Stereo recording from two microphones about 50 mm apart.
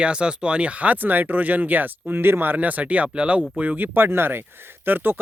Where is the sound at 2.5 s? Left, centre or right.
Right.